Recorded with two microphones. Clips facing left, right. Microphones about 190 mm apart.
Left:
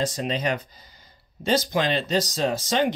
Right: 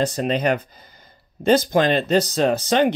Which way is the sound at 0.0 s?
60° right (ahead or behind).